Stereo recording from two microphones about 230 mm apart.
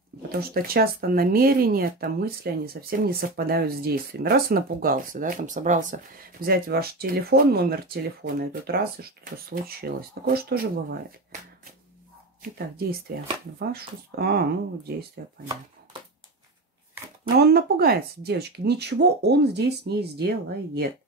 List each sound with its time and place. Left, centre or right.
0.3 s speech: right
12.4 s speech: right
17.2 s speech: right